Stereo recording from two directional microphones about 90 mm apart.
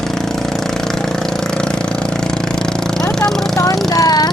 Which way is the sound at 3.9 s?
45° left (ahead or behind).